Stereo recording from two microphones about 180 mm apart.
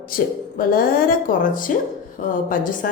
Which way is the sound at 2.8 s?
50° left (ahead or behind).